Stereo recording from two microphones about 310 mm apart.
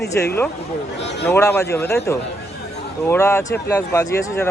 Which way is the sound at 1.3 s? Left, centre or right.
Centre.